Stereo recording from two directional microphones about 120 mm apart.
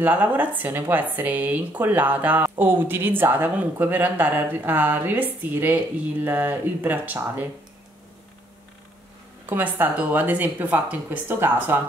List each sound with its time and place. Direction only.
0.0 s speech: 15° right (ahead or behind)
9.5 s speech: 15° right (ahead or behind)